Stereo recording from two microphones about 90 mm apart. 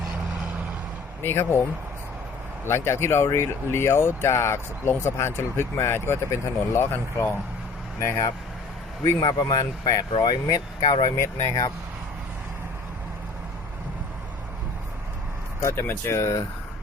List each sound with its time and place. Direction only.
1.2 s speech: 25° left (ahead or behind)
2.6 s speech: 30° left (ahead or behind)
9.2 s speech: 45° left (ahead or behind)
11.2 s speech: 30° left (ahead or behind)
15.6 s speech: 25° left (ahead or behind)